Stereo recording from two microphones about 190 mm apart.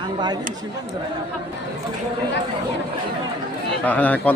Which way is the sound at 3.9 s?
10° left (ahead or behind).